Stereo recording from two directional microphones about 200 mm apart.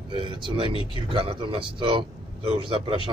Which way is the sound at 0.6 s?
25° left (ahead or behind).